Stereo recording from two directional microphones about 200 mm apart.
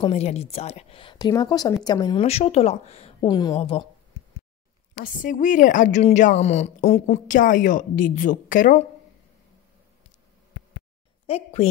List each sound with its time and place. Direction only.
0.0 s a woman's voice: 30° left (ahead or behind)
2.2 s a woman's voice: 30° left (ahead or behind)
5.0 s a woman's voice: 40° left (ahead or behind)
11.2 s a woman's voice: 30° left (ahead or behind)